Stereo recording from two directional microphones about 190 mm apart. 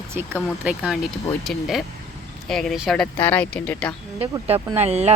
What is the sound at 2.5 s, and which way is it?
Speech, centre (ahead or behind).